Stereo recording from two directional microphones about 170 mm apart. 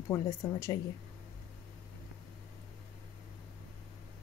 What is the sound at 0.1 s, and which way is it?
Speech, 20° left (ahead or behind).